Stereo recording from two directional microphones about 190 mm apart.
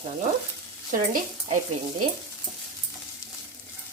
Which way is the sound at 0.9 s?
40° right (ahead or behind).